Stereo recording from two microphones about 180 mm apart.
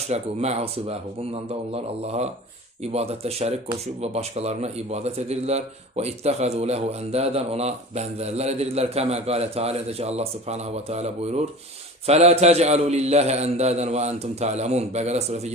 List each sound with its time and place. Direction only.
0.1 s a man's voice: 35° right (ahead or behind)